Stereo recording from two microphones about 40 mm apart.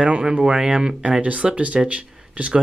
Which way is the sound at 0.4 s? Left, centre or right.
Centre.